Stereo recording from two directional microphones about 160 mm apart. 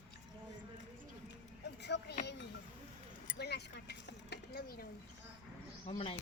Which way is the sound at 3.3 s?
90° left.